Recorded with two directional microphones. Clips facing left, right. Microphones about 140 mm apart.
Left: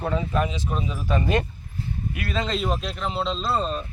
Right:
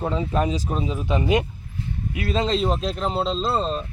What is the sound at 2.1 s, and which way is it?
Speech, 30° right (ahead or behind).